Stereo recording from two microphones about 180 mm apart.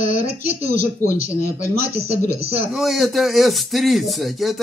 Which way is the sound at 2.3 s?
35° right (ahead or behind).